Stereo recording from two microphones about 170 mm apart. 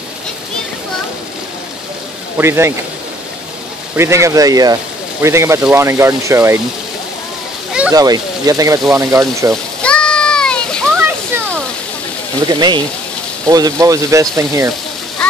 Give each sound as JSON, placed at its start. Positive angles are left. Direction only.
{"t": 2.3, "sound": "speech", "side_deg": -15}
{"t": 3.9, "sound": "speech", "side_deg": -15}
{"t": 7.9, "sound": "speech", "side_deg": -20}
{"t": 9.8, "sound": "splash", "side_deg": 5}
{"t": 12.4, "sound": "speech", "side_deg": -25}